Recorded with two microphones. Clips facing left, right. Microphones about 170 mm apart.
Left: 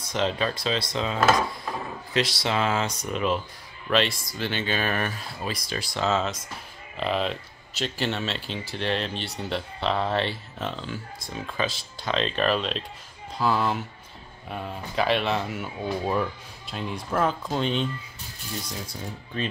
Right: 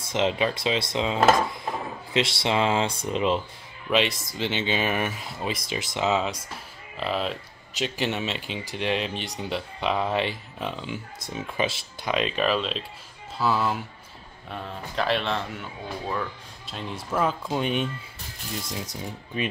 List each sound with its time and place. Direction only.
0.1 s speech: 20° right (ahead or behind)
7.0 s speech: 5° right (ahead or behind)
7.8 s speech: 15° right (ahead or behind); by 15.4 s 5° left (ahead or behind)
16.7 s speech: 5° right (ahead or behind); by 19.4 s 20° right (ahead or behind)